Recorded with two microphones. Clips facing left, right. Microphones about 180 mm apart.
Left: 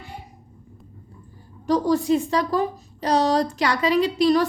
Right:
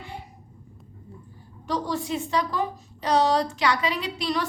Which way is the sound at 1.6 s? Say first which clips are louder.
Left 8 dB; 40° left (ahead or behind).